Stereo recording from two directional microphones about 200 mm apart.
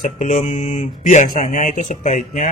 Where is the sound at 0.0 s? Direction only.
40° left (ahead or behind).